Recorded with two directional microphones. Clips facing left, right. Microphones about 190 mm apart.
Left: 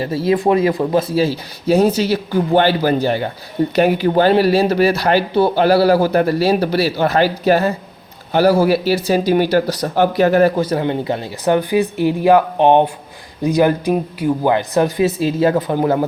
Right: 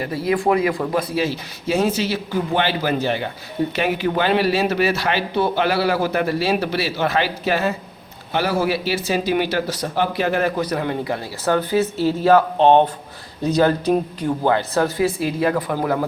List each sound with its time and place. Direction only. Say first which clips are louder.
0.0 s speech: left 4 dB; 25° left (ahead or behind); by 10.5 s 40° left (ahead or behind)
10.6 s speech: left 4 dB; 25° left (ahead or behind)